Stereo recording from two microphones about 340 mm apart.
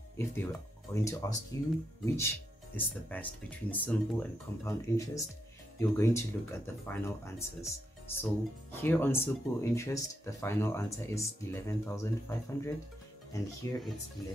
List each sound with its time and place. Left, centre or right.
0.2 s speech: centre